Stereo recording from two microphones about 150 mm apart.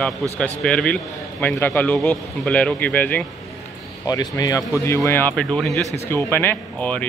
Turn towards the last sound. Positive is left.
turn(degrees=10)  # may be behind; listen again after turning